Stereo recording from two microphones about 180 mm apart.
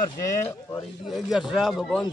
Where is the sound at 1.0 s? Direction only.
Centre (ahead or behind).